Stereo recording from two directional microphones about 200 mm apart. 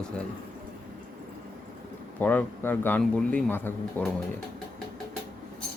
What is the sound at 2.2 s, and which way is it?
Speech, 10° left (ahead or behind).